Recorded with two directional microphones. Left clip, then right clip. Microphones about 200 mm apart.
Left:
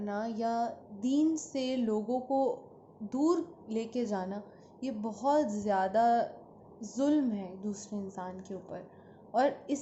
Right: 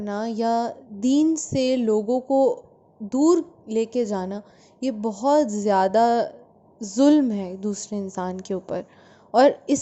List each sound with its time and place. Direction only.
0.0 s a woman's voice: 45° right (ahead or behind)